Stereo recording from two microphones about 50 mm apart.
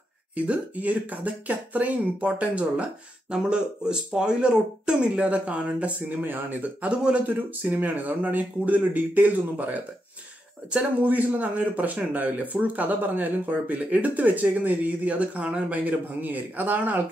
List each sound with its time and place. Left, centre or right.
0.4 s speech: right
3.3 s speech: centre; by 6.7 s right
6.8 s speech: right
7.2 s speech: right
15.8 s speech: right